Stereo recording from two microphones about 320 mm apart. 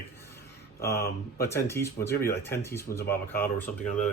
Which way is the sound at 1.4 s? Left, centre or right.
Centre.